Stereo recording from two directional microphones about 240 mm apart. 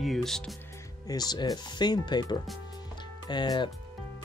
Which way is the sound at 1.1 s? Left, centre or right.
Centre.